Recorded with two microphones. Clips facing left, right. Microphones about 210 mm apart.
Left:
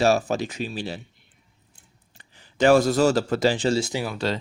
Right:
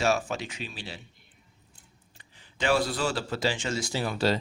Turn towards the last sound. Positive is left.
turn(degrees=-5)  # may be behind; listen again after turning